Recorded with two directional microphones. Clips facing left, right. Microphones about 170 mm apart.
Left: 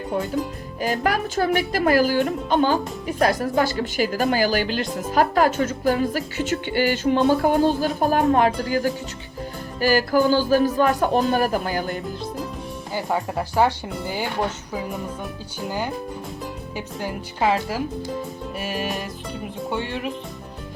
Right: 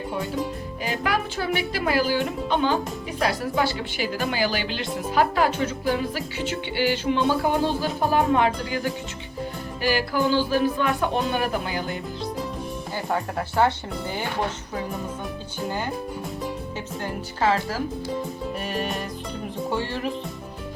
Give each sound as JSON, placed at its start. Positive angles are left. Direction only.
{"t": 0.8, "sound": "music", "side_deg": 45}
{"t": 12.9, "sound": "speech", "side_deg": 15}
{"t": 16.7, "sound": "speech", "side_deg": 15}
{"t": 18.6, "sound": "music", "side_deg": 5}